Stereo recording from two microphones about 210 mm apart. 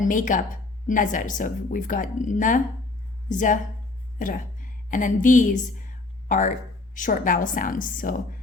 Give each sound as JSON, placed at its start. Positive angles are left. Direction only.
{"t": 0.0, "sound": "a woman's voice", "side_deg": 40}